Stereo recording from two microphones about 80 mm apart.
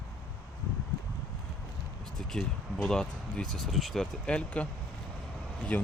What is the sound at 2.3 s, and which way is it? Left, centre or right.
Speech, centre.